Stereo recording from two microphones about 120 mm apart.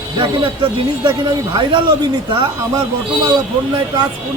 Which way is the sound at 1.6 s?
40° right (ahead or behind).